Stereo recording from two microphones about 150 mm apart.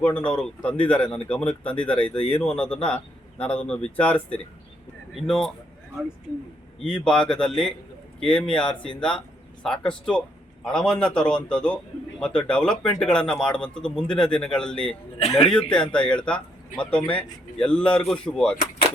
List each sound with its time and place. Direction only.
0.0 s a man's voice: 10° left (ahead or behind)
6.8 s speech: 5° left (ahead or behind)
15.2 s speech: 40° left (ahead or behind)
15.7 s speech: 10° left (ahead or behind)
17.0 s speech: 30° left (ahead or behind)
17.6 s speech: 5° left (ahead or behind)